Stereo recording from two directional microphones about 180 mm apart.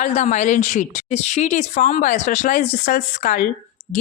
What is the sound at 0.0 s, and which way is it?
Speech, 40° left (ahead or behind).